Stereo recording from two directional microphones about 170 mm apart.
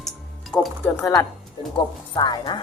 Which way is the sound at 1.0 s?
20° left (ahead or behind).